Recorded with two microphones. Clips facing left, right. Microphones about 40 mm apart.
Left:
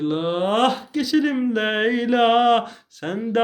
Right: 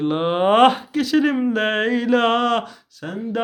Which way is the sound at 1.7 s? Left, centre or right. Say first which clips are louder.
Right 1 dB; centre.